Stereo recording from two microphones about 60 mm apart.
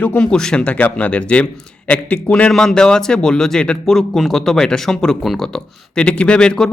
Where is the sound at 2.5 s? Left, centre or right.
Centre.